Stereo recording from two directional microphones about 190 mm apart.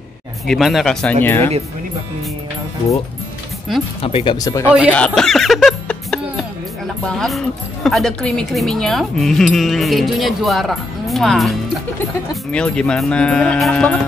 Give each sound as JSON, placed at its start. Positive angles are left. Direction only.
{"t": 0.5, "sound": "a woman's voice", "side_deg": 0}
{"t": 4.0, "sound": "speech", "side_deg": 25}
{"t": 4.9, "sound": "music", "side_deg": 5}
{"t": 7.1, "sound": "a woman's voice", "side_deg": 0}